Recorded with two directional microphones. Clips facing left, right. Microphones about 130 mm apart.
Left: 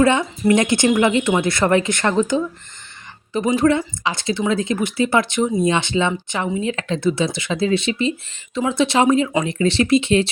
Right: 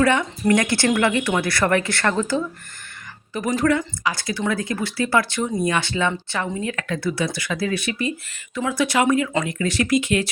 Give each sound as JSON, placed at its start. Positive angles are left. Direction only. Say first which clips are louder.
{"t": 0.0, "sound": "speech", "louder": "left 3 dB", "side_deg": 20}